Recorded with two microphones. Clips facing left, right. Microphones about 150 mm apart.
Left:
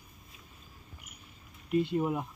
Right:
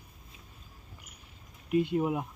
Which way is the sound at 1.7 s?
10° right (ahead or behind).